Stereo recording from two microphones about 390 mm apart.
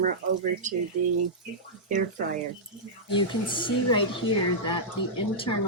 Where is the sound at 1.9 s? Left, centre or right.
Centre.